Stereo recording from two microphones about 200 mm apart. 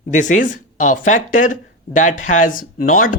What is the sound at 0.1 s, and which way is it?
Speech, 40° left (ahead or behind).